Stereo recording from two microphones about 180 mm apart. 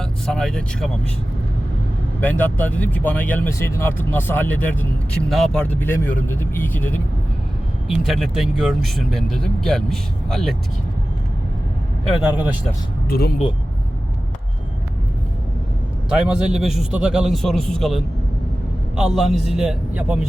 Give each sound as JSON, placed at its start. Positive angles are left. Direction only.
{"t": 0.0, "sound": "speech", "side_deg": 5}
{"t": 2.2, "sound": "speech", "side_deg": 10}
{"t": 7.9, "sound": "speech", "side_deg": 0}
{"t": 13.1, "sound": "speech", "side_deg": 60}
{"t": 16.0, "sound": "speech", "side_deg": -5}